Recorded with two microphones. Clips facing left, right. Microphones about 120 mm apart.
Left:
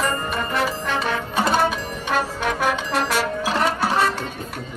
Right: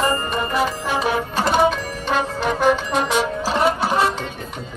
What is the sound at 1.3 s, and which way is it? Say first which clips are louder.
Music: right 2 dB; centre (ahead or behind).